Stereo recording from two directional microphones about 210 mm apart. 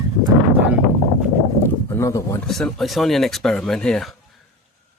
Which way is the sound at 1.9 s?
15° left (ahead or behind).